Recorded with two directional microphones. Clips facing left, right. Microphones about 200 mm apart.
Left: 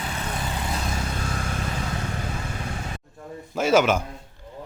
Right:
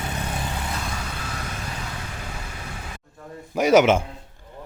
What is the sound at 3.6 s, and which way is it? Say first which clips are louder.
Speech: right 3 dB; 20° right (ahead or behind).